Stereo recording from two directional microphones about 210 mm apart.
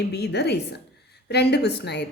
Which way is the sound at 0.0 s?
50° left (ahead or behind).